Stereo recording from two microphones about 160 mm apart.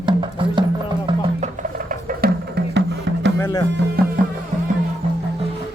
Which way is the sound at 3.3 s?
20° left (ahead or behind).